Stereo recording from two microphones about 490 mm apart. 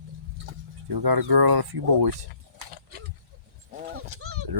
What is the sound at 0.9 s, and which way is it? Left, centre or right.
Speech, right.